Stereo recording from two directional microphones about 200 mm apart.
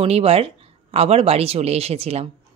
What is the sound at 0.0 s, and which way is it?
Speech, 30° right (ahead or behind).